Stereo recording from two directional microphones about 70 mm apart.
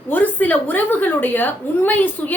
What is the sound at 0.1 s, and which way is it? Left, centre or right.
A woman's voice, left.